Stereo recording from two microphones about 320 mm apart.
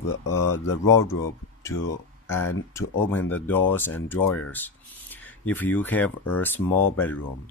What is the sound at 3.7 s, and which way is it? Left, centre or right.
Speech, centre.